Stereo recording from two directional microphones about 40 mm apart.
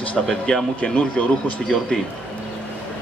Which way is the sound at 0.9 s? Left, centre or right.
Left.